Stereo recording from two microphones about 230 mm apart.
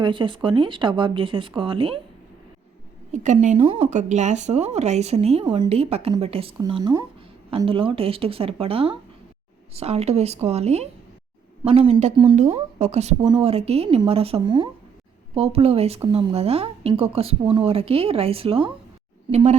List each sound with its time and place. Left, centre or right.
0.0 s speech: right
3.1 s speech: right